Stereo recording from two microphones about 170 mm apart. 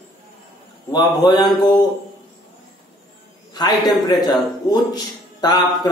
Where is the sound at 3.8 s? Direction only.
25° left (ahead or behind).